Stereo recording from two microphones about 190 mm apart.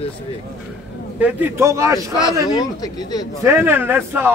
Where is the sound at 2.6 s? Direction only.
20° left (ahead or behind).